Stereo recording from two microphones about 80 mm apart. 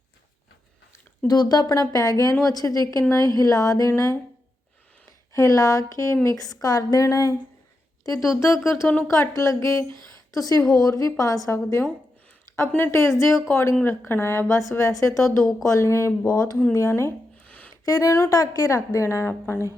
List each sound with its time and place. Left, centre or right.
1.3 s a woman's voice: left
3.8 s a woman's voice: left
5.3 s a woman's voice: left
12.5 s a woman's voice: left
16.7 s a woman's voice: left
17.4 s a sound: centre
17.8 s a woman's voice: left
18.3 s a woman's voice: left